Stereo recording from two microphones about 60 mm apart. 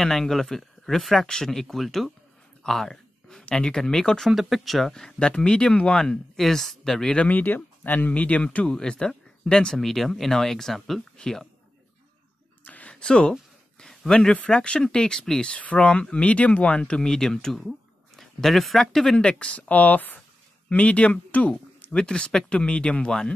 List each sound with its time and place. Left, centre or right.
0.0 s speech: centre
2.6 s a sound: centre
3.4 s speech: centre
4.3 s speech: centre
7.2 s speech: left; by 11.4 s centre
12.6 s a sound: left
13.0 s speech: centre
17.6 s a sound: centre
19.1 s speech: centre